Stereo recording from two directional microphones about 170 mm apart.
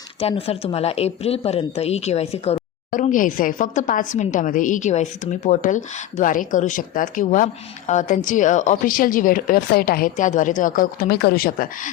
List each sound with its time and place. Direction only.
0.2 s speech: 35° left (ahead or behind)
2.9 s a woman's voice: 50° left (ahead or behind)